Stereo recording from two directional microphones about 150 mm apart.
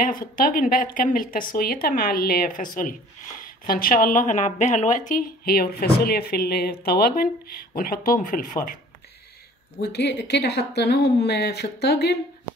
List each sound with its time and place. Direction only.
0.0 s speech: 70° left (ahead or behind)
3.6 s speech: 75° left (ahead or behind); by 7.2 s 90° left
7.7 s speech: 75° left (ahead or behind)
9.8 s speech: 90° left